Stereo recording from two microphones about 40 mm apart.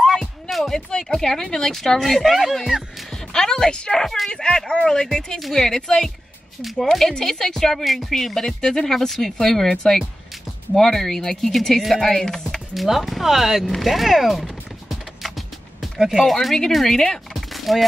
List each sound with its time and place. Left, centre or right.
0.0 s music: centre
0.7 s speech: centre
3.3 s speech: centre
6.6 s speech: centre
8.1 s speech: centre
12.7 s speech: centre
13.8 s music: centre
16.2 s speech: centre
17.5 s a sound: centre